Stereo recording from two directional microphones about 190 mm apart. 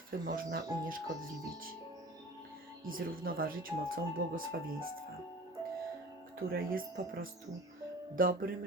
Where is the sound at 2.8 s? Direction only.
90° right.